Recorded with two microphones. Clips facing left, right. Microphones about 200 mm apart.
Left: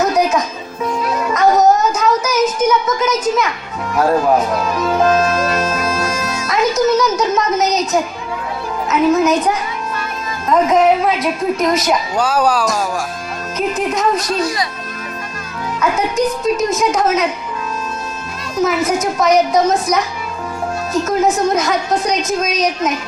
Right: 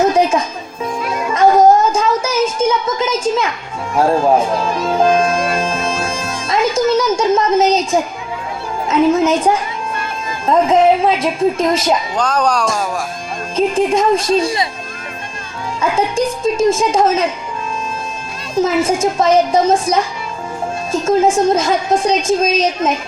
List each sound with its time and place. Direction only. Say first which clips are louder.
0.0 s music: right 2 dB; 30° right (ahead or behind)
1.1 s child singing: right 2 dB; 25° right (ahead or behind)
3.9 s a woman's voice: right 1 dB; 30° right (ahead or behind)
12.1 s speech: left 1 dB; 5° left (ahead or behind)
13.6 s a woman's voice: right 4 dB; 30° right (ahead or behind)
15.8 s a woman's voice: even; 30° right (ahead or behind)
18.5 s a woman's voice: right 1 dB; 30° right (ahead or behind)